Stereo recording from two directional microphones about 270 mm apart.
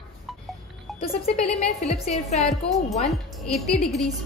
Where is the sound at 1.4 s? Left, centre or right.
Left.